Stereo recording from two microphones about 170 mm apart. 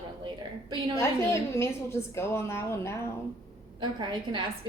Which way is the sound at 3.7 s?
30° right (ahead or behind).